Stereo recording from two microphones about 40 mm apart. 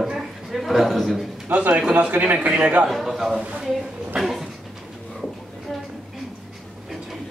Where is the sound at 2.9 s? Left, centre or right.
Centre.